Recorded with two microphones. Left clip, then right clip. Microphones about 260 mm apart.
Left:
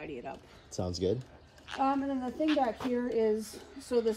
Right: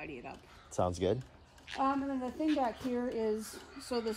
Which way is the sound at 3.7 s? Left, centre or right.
Right.